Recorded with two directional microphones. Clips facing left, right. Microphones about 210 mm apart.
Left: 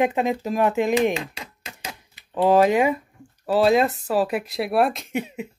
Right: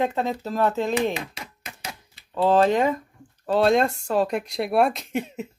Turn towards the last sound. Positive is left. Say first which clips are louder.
# even
turn(degrees=0)  # may be behind; listen again after turning